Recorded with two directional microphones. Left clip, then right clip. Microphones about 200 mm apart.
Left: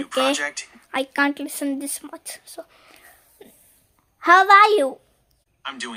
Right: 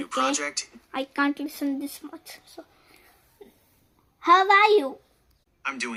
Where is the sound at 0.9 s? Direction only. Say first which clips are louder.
Left 5 dB; 30° left (ahead or behind).